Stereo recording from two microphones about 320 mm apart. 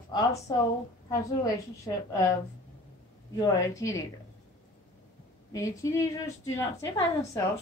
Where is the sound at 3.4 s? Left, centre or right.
Centre.